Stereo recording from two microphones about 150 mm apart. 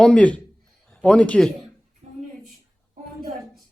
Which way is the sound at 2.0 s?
45° right (ahead or behind).